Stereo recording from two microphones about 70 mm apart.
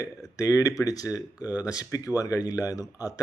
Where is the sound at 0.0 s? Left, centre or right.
Left.